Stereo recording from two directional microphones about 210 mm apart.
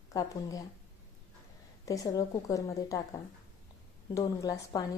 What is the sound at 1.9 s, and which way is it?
A woman's voice, 15° left (ahead or behind).